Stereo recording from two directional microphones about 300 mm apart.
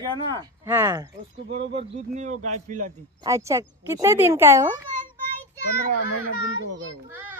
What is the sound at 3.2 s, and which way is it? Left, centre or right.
Speech, centre.